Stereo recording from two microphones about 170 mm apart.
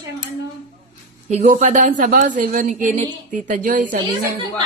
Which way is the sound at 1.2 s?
40° right (ahead or behind).